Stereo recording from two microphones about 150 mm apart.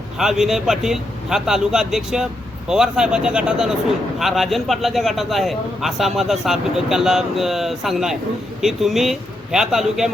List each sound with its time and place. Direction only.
0.2 s speech: centre (ahead or behind)